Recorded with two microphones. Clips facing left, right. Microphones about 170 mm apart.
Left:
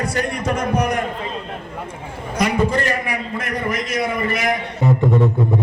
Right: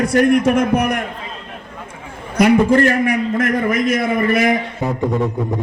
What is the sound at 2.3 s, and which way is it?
A man's voice, 60° right (ahead or behind).